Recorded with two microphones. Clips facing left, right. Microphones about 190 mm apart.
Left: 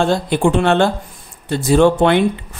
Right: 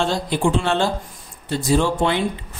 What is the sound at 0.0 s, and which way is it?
Speech, 55° left (ahead or behind).